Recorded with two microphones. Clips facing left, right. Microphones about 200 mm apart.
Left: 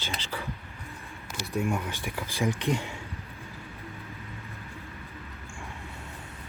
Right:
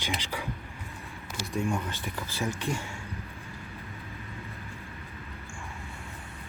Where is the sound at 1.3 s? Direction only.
Centre (ahead or behind).